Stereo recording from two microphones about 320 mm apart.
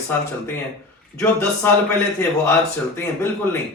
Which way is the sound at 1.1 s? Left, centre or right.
Centre.